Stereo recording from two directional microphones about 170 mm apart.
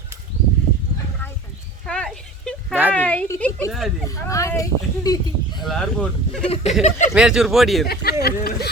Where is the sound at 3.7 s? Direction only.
Centre (ahead or behind).